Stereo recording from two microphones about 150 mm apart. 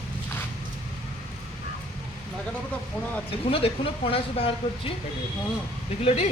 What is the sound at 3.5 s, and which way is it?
Speech, 40° left (ahead or behind).